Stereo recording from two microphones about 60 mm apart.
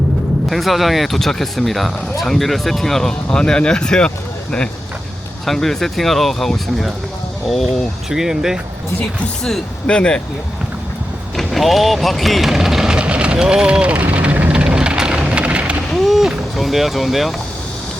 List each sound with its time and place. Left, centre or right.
0.5 s speech: centre
5.5 s speech: centre
9.8 s speech: centre
11.3 s speech: centre
14.0 s vehicle: right
16.0 s a sound: centre
16.6 s speech: centre